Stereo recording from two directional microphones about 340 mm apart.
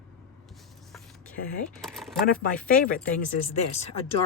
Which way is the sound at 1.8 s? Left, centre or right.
Centre.